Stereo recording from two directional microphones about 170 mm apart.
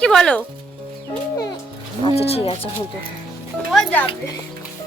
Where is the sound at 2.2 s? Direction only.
35° left (ahead or behind).